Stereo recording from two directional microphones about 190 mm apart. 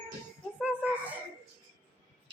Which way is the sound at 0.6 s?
5° right (ahead or behind).